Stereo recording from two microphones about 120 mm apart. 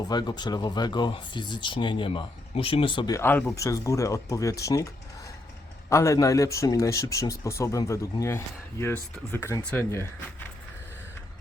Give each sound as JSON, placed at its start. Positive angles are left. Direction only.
{"t": 0.1, "sound": "speech", "side_deg": 35}
{"t": 3.1, "sound": "speech", "side_deg": 20}
{"t": 5.9, "sound": "speech", "side_deg": 25}